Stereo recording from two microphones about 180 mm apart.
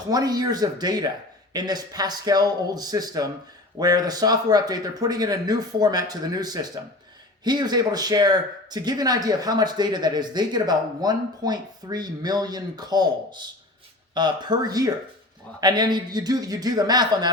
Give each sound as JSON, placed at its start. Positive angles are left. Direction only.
{"t": 0.1, "sound": "speech", "side_deg": -20}
{"t": 14.1, "sound": "speech", "side_deg": -25}